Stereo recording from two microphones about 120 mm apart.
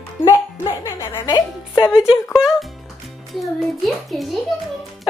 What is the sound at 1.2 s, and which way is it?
Speech, 40° left (ahead or behind).